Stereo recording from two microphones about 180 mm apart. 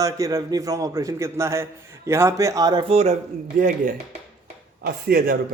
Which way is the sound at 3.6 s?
50° right (ahead or behind).